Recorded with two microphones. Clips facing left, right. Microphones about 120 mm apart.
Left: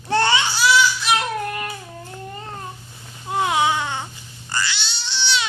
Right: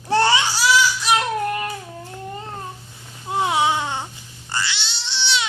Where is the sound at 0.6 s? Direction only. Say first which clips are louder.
Left 1 dB; 35° right (ahead or behind).